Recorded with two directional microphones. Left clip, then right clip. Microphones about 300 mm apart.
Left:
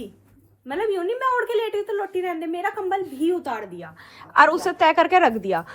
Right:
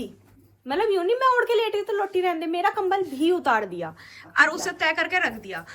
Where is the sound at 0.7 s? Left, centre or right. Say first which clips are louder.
Right 2 dB; centre.